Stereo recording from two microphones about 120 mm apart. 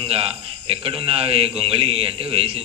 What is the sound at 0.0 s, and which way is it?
Speech, 50° right (ahead or behind).